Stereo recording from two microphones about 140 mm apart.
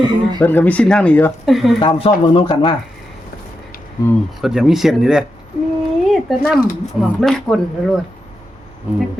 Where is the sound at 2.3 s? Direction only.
35° left (ahead or behind).